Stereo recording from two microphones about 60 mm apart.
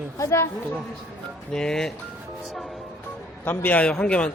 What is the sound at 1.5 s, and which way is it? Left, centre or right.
Speech, centre.